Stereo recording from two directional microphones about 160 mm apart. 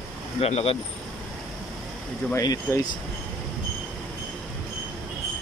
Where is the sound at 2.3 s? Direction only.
20° left (ahead or behind).